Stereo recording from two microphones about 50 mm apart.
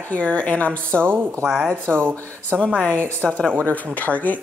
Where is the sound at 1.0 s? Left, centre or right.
Right.